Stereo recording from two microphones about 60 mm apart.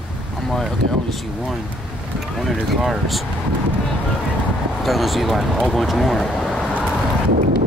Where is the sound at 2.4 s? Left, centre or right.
Centre.